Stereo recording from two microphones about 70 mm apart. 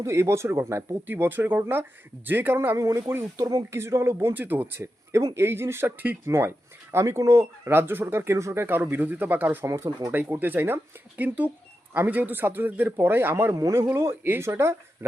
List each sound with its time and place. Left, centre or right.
0.0 s speech: right
1.0 s speech: right
2.7 s speech: right
4.4 s speech: right
7.0 s speech: right
7.7 s speech: right
8.6 s speech: right
10.1 s speech: right
13.6 s speech: right